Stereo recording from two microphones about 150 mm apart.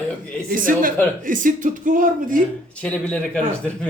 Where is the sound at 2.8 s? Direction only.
5° left (ahead or behind).